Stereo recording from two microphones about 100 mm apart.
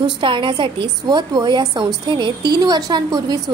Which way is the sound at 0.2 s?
55° right (ahead or behind).